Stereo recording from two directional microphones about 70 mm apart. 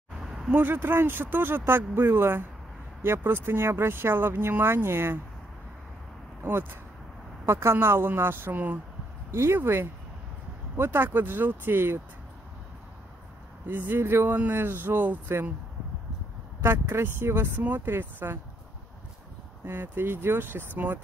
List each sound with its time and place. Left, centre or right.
0.2 s a sound: centre
0.5 s speech: right
6.4 s speech: right
13.7 s speech: right
16.6 s speech: right
19.6 s speech: right